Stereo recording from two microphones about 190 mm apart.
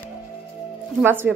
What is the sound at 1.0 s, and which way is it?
Speech, 10° right (ahead or behind).